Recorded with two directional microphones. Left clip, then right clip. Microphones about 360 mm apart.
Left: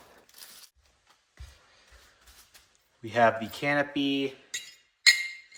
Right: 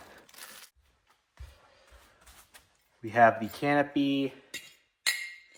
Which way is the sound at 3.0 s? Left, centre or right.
Centre.